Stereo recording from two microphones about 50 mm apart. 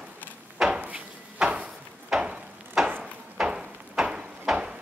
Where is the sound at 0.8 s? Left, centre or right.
Right.